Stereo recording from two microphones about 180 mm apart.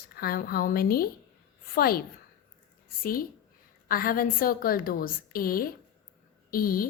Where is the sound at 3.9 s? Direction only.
55° left (ahead or behind).